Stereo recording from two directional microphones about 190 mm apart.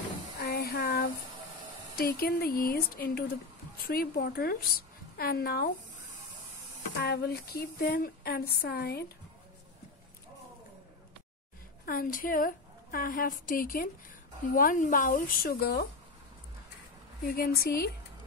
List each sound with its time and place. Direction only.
0.4 s a sound: 55° left (ahead or behind)
2.0 s a woman's voice: 50° left (ahead or behind)
6.9 s speech: 60° left (ahead or behind)
11.8 s a woman's voice: 50° left (ahead or behind)
17.3 s speech: 55° left (ahead or behind)